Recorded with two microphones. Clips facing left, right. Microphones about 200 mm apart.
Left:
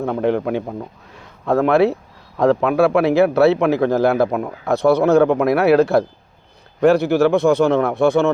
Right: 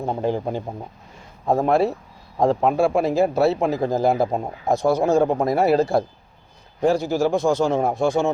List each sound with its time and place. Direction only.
0.0 s a man's voice: 70° left (ahead or behind)